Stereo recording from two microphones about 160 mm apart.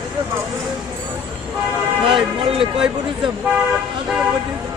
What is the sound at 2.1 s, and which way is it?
Speech, 30° right (ahead or behind).